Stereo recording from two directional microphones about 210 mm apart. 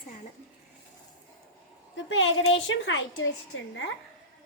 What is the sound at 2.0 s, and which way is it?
A woman's voice, 65° left (ahead or behind).